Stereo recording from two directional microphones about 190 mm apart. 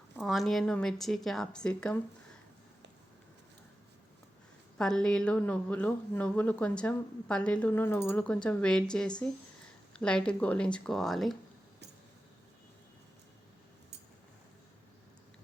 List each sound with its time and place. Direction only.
0.2 s a woman's voice: centre (ahead or behind)
4.8 s a woman's voice: 5° left (ahead or behind)